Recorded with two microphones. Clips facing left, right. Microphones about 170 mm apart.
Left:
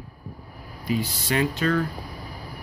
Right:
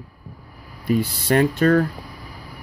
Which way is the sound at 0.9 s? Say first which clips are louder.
Right 6 dB; 55° right (ahead or behind).